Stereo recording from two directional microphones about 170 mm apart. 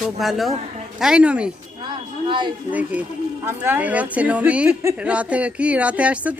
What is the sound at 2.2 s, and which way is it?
Speech, 30° right (ahead or behind).